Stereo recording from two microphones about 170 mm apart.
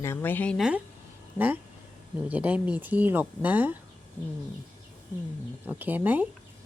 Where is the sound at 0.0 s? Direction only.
15° left (ahead or behind).